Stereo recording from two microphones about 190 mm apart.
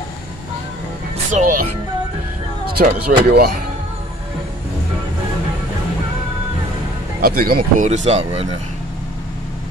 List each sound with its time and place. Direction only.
1.3 s speech: 45° right (ahead or behind)
2.6 s speech: 55° right (ahead or behind)
7.2 s speech: 50° right (ahead or behind); by 8.5 s 30° right (ahead or behind)